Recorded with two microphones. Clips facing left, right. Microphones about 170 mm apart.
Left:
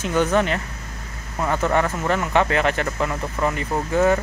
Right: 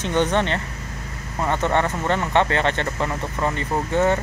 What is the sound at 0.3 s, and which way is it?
Speech, 5° left (ahead or behind).